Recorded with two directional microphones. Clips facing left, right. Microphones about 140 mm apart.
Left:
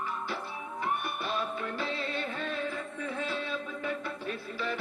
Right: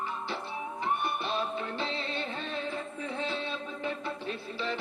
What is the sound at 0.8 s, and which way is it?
Music, 25° right (ahead or behind).